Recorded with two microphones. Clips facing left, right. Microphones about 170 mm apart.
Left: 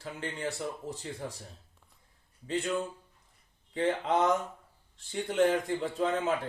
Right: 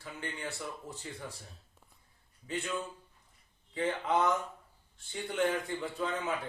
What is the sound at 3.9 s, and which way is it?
Speech, 40° left (ahead or behind).